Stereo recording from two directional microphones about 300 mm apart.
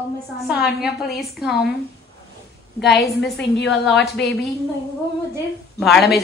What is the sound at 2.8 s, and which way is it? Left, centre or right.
Speech, left.